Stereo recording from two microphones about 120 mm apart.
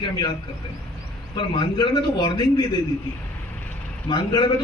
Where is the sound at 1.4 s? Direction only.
40° left (ahead or behind).